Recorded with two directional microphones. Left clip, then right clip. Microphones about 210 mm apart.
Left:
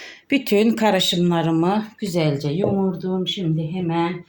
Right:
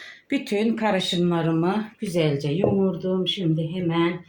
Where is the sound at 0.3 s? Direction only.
40° left (ahead or behind).